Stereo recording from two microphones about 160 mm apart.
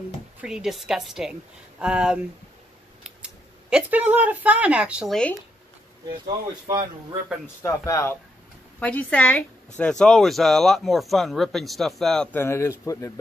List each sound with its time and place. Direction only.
0.4 s speech: 5° right (ahead or behind)
3.7 s speech: 10° right (ahead or behind)
6.2 s speech: 30° right (ahead or behind)
7.6 s speech: 20° left (ahead or behind)